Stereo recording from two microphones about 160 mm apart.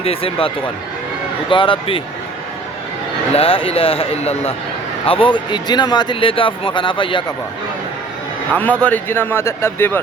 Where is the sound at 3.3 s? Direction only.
35° left (ahead or behind).